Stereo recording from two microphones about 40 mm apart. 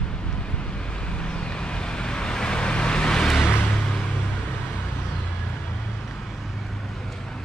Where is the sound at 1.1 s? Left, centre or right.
Left.